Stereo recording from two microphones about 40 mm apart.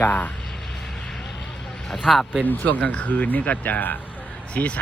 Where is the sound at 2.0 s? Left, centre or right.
Centre.